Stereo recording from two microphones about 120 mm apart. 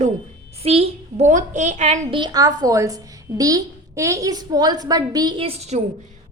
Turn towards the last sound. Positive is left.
turn(degrees=-65)  # may be behind; listen again after turning